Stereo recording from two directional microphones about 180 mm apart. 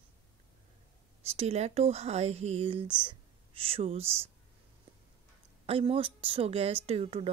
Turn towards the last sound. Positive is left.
turn(degrees=-35)  # may be behind; listen again after turning